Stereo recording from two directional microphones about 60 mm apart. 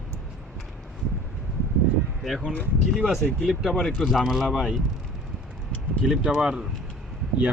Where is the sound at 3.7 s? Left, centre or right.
Centre.